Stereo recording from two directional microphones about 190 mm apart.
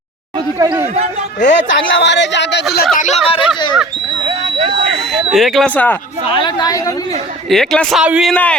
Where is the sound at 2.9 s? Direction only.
40° left (ahead or behind).